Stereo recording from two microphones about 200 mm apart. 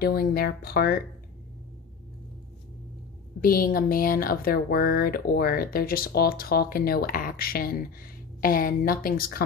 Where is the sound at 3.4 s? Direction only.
45° left (ahead or behind).